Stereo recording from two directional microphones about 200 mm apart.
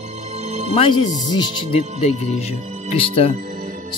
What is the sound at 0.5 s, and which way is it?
Music, 35° right (ahead or behind).